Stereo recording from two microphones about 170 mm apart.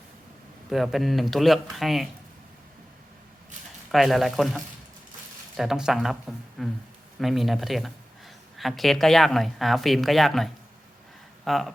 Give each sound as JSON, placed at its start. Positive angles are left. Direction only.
{"t": 0.7, "sound": "speech", "side_deg": 0}
{"t": 3.9, "sound": "speech", "side_deg": 0}